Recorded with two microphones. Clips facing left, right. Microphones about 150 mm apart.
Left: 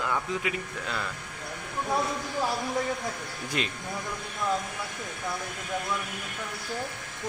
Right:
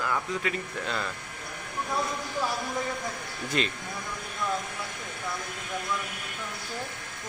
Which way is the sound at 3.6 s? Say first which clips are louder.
Right 3 dB; 5° left (ahead or behind).